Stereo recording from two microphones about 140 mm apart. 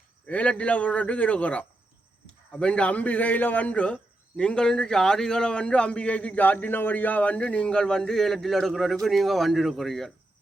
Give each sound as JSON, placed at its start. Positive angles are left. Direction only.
{"t": 0.3, "sound": "a man's voice", "side_deg": 10}